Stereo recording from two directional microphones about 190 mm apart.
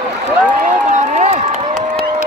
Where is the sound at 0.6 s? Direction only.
40° right (ahead or behind).